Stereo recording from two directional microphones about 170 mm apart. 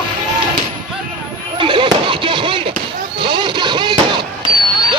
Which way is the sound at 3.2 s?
30° right (ahead or behind).